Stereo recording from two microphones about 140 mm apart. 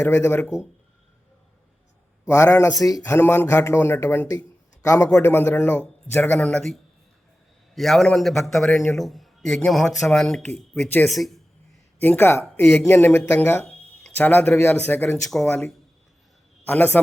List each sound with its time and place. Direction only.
0.0 s speech: 15° left (ahead or behind)
2.2 s a man's voice: 20° left (ahead or behind); by 6.7 s 5° left (ahead or behind)
7.8 s speech: centre (ahead or behind)
11.1 s speech: centre (ahead or behind)
11.9 s speech: 15° left (ahead or behind)